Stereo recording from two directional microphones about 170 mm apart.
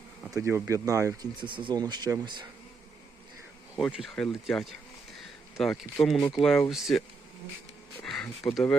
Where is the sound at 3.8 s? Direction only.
Centre (ahead or behind).